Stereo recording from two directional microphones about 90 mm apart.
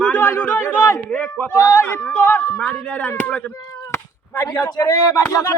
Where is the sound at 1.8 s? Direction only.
25° left (ahead or behind).